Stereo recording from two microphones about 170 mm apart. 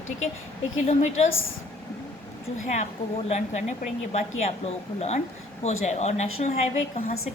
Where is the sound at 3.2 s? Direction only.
40° left (ahead or behind).